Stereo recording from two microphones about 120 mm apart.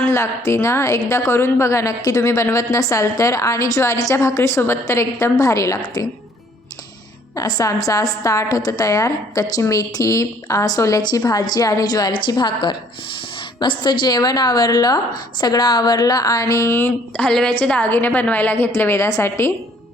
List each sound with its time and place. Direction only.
0.0 s a woman's voice: 25° left (ahead or behind)
7.3 s a woman's voice: 30° left (ahead or behind)